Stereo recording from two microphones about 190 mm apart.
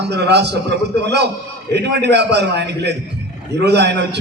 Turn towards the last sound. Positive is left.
turn(degrees=-65)  # may be behind; listen again after turning